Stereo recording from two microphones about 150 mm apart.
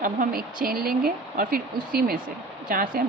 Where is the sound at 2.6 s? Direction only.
70° right (ahead or behind).